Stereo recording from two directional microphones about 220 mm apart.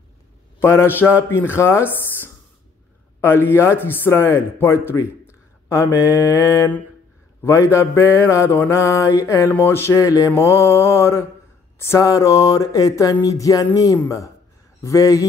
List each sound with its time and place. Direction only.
0.6 s mantra: 10° left (ahead or behind)
4.8 s speech: 10° left (ahead or behind)
7.4 s mantra: 10° left (ahead or behind)